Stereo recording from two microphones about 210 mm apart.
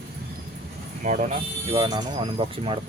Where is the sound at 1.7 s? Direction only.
20° right (ahead or behind).